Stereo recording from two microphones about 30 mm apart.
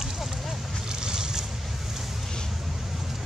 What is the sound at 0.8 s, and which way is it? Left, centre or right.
Boat, right.